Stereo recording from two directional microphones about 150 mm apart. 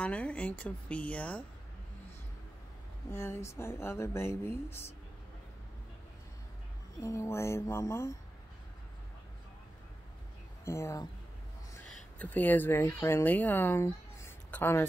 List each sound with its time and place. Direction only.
0.0 s speech: 10° left (ahead or behind)
3.1 s speech: 15° left (ahead or behind)
7.0 s speech: 20° left (ahead or behind)
10.6 s speech: 20° left (ahead or behind)
12.2 s speech: 10° left (ahead or behind)